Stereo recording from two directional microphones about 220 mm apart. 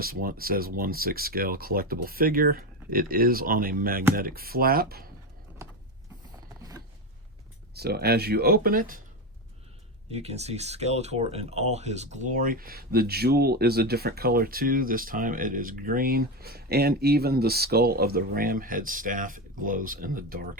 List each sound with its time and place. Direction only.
0.0 s speech: 40° right (ahead or behind)
5.6 s power windows: 15° right (ahead or behind)
6.6 s zipper: 15° right (ahead or behind)
7.8 s speech: 45° right (ahead or behind)
10.1 s speech: 30° right (ahead or behind)